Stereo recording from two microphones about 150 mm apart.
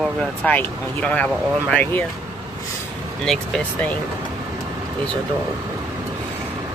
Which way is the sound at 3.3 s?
5° left (ahead or behind).